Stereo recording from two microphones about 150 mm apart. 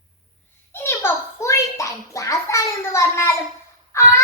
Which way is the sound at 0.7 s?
15° left (ahead or behind).